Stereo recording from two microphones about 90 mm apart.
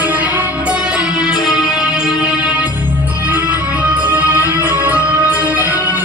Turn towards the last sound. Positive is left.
turn(degrees=-20)  # may be behind; listen again after turning